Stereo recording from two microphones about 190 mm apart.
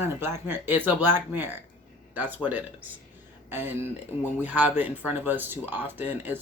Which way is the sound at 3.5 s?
10° right (ahead or behind).